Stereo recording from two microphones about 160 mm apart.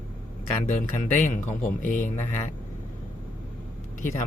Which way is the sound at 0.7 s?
50° left (ahead or behind).